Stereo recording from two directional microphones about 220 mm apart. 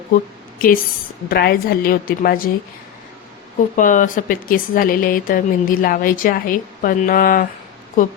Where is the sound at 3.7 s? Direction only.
35° left (ahead or behind).